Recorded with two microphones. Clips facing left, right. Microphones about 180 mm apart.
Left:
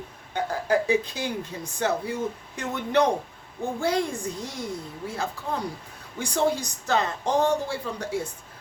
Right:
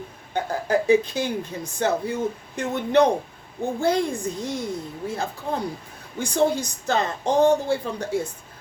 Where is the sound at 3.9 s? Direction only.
25° right (ahead or behind).